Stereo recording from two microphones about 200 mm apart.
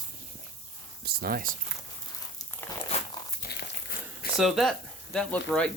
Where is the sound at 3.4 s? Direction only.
55° left (ahead or behind).